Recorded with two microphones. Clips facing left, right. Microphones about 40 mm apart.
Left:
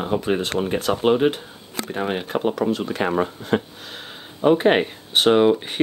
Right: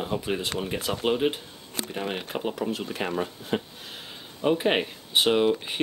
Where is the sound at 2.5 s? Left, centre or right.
Left.